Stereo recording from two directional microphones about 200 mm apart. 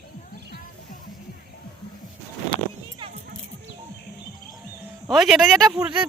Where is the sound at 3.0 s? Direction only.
25° right (ahead or behind).